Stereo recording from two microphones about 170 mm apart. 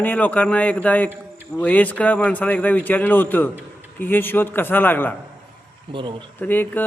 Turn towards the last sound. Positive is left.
turn(degrees=10)  # may be behind; listen again after turning